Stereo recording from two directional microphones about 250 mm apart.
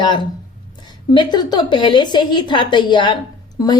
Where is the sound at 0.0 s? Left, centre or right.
Centre.